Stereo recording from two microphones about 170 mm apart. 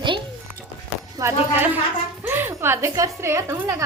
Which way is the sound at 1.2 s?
10° right (ahead or behind).